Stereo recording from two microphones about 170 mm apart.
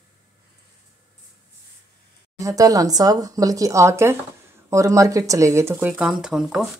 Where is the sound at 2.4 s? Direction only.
20° right (ahead or behind).